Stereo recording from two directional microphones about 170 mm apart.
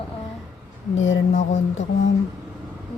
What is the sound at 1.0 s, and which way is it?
Speech, 90° left.